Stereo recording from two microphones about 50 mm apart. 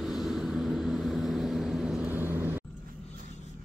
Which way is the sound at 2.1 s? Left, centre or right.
Right.